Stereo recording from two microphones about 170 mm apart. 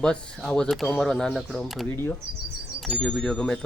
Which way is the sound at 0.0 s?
5° left (ahead or behind).